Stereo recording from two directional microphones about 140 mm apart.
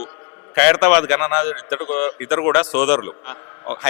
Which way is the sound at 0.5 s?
10° left (ahead or behind).